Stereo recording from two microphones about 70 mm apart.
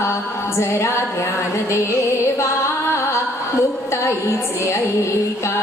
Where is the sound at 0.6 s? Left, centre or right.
Left.